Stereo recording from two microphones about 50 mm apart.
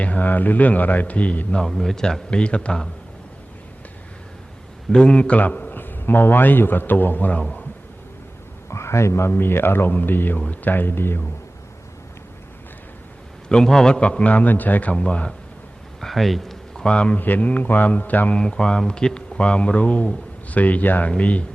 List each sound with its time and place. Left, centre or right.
0.0 s a man's voice: left
1.6 s a man's voice: centre
4.9 s a man's voice: centre
5.4 s a man's voice: left
8.7 s speech: left
9.3 s a man's voice: left
13.5 s a man's voice: centre
14.3 s a man's voice: left
16.0 s a sound: centre
16.9 s a man's voice: left
17.2 s a man's voice: left
18.3 s a man's voice: centre